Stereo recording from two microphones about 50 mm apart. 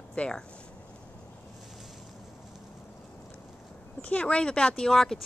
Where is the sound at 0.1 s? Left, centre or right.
Left.